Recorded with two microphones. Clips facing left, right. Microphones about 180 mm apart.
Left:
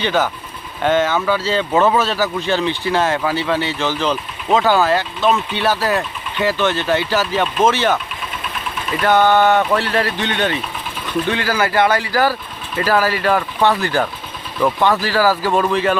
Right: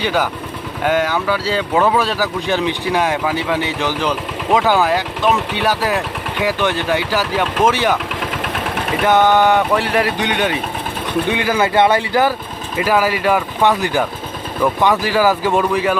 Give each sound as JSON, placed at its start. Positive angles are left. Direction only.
{"t": 0.0, "sound": "speech", "side_deg": -10}
{"t": 8.2, "sound": "engine", "side_deg": -75}
{"t": 9.0, "sound": "speech", "side_deg": -15}